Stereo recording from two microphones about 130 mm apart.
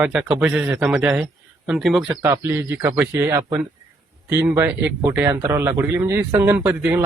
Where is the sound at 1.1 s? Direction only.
5° right (ahead or behind).